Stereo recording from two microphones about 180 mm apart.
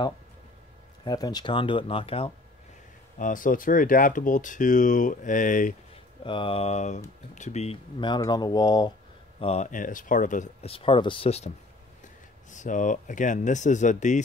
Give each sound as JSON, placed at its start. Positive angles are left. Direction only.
{"t": 1.0, "sound": "speech", "side_deg": 20}
{"t": 3.2, "sound": "speech", "side_deg": 45}
{"t": 6.2, "sound": "speech", "side_deg": 30}
{"t": 9.4, "sound": "speech", "side_deg": 35}
{"t": 9.7, "sound": "speech", "side_deg": 45}